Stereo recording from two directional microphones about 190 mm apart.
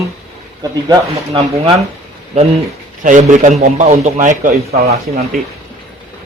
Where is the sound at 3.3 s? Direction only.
40° right (ahead or behind).